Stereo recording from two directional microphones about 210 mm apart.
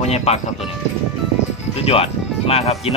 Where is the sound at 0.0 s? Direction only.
30° left (ahead or behind).